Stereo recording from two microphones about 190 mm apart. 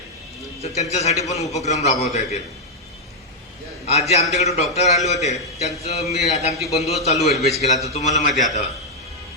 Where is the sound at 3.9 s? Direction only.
35° left (ahead or behind).